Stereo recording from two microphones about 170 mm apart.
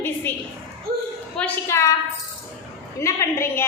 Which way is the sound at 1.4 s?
15° left (ahead or behind).